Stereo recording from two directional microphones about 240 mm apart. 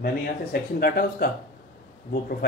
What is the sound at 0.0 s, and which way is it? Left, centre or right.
Speech, left.